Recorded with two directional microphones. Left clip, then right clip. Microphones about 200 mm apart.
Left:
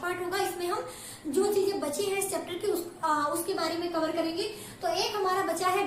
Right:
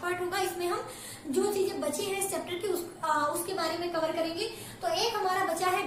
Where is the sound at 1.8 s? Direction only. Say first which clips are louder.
Left 2 dB; 15° left (ahead or behind).